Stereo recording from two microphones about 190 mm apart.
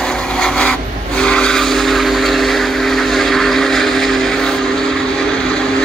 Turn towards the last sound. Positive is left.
turn(degrees=5)  # may be behind; listen again after turning